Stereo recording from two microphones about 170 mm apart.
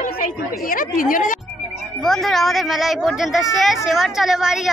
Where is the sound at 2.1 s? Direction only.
Centre (ahead or behind).